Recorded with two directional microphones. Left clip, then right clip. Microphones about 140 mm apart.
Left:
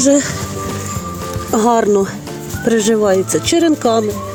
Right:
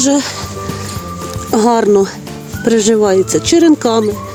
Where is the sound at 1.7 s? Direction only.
35° right (ahead or behind).